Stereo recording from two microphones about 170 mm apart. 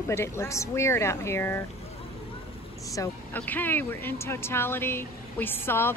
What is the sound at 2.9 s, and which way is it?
Speech, 15° left (ahead or behind).